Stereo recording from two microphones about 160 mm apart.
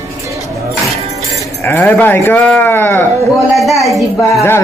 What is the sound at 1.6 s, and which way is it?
Speech, 15° left (ahead or behind).